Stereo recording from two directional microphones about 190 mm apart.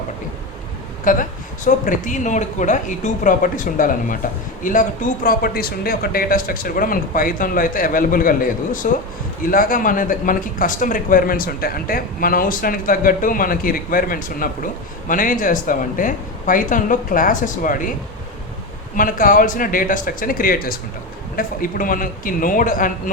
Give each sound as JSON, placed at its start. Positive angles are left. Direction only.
{"t": 1.0, "sound": "speech", "side_deg": 45}
{"t": 18.9, "sound": "speech", "side_deg": 45}